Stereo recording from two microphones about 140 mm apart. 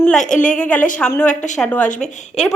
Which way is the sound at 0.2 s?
60° left (ahead or behind).